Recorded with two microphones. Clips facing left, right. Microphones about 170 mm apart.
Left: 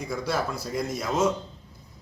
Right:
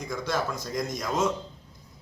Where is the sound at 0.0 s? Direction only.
5° left (ahead or behind).